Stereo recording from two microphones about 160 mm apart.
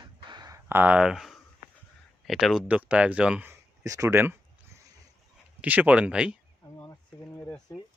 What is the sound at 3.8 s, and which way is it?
Speech, 20° right (ahead or behind).